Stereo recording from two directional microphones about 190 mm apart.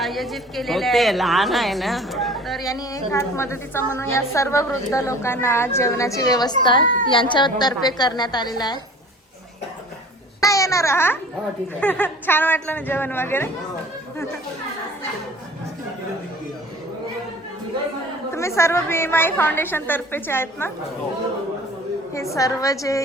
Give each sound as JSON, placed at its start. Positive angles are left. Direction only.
{"t": 0.0, "sound": "speech", "side_deg": 0}
{"t": 2.6, "sound": "a woman's voice", "side_deg": 20}
{"t": 10.4, "sound": "a woman's voice", "side_deg": 15}
{"t": 18.3, "sound": "a woman's voice", "side_deg": 15}
{"t": 22.1, "sound": "a woman's voice", "side_deg": 15}